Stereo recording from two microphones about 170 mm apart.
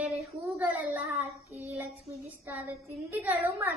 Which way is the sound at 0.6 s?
10° right (ahead or behind).